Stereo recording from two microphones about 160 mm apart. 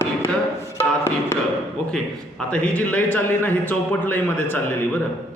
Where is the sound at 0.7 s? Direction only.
15° left (ahead or behind).